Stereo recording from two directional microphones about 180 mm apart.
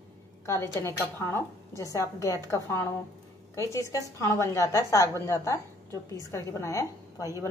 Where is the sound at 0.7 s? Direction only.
15° left (ahead or behind).